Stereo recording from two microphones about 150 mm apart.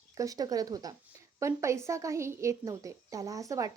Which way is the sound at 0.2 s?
25° right (ahead or behind).